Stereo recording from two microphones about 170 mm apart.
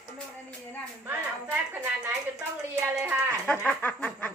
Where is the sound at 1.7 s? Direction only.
10° right (ahead or behind).